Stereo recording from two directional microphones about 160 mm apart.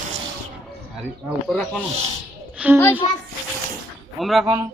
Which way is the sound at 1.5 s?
5° left (ahead or behind).